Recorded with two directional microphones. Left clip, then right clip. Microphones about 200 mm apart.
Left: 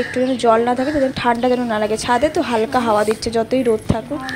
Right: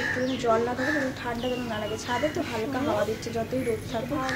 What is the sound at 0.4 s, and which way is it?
A woman's voice, 45° left (ahead or behind).